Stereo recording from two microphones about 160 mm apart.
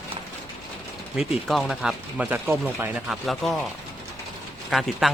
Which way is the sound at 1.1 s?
Centre (ahead or behind).